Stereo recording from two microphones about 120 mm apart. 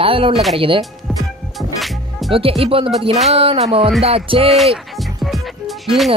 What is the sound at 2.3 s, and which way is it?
Speech, 50° right (ahead or behind).